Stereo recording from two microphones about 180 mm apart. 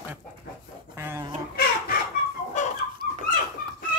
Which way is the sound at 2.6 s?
40° left (ahead or behind).